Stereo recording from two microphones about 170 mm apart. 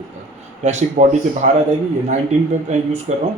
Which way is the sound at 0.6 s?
45° right (ahead or behind).